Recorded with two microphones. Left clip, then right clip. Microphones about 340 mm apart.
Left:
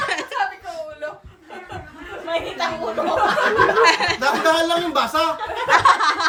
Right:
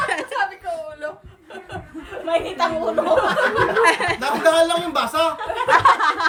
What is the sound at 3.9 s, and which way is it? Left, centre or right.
Speech, centre.